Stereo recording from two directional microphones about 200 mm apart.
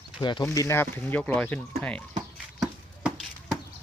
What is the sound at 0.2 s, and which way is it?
Speech, 20° left (ahead or behind).